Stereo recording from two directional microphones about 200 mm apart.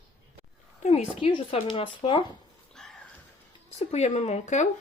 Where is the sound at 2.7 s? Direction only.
Centre (ahead or behind).